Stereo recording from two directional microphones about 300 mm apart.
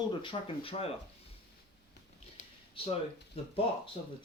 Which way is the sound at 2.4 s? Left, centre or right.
Left.